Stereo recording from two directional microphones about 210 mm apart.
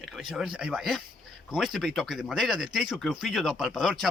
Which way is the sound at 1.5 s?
Centre (ahead or behind).